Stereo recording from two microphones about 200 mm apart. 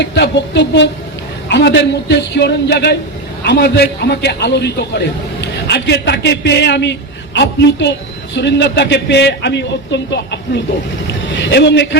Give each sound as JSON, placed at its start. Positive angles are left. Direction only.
{"t": 0.0, "sound": "a man's voice", "side_deg": 60}